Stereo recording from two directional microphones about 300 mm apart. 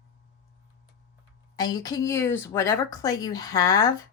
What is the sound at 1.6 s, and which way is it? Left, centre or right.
Speech, centre.